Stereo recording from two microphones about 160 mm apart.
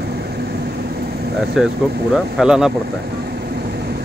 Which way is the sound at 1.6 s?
5° right (ahead or behind).